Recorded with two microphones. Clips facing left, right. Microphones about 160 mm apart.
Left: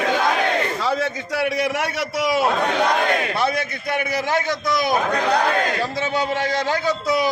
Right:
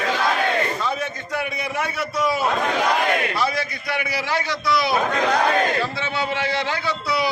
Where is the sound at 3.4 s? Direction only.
55° left (ahead or behind).